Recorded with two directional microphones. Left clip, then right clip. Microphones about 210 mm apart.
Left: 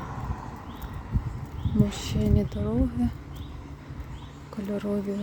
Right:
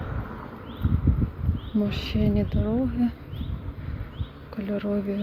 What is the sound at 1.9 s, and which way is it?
Speech, 15° left (ahead or behind).